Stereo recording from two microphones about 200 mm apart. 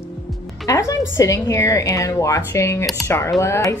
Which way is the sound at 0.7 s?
15° left (ahead or behind).